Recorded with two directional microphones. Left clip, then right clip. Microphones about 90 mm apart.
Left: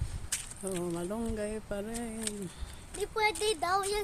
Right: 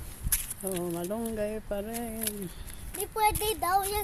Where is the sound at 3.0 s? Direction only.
20° right (ahead or behind).